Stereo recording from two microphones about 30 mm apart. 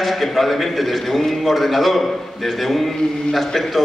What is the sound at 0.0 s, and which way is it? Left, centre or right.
A man's voice, centre.